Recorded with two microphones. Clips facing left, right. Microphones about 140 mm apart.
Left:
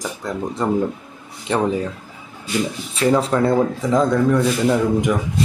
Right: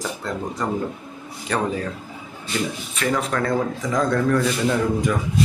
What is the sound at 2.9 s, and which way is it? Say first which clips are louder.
Speech: left 7 dB; 30° left (ahead or behind).